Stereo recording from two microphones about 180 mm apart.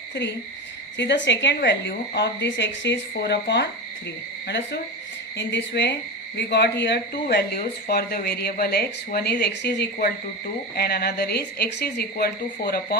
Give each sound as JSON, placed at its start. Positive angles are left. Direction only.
{"t": 0.9, "sound": "speech", "side_deg": 85}